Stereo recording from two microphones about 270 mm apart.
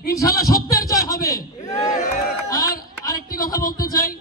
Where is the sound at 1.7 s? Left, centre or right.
Left.